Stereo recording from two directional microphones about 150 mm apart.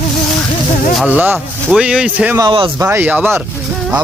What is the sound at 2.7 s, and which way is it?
Speech, 15° right (ahead or behind).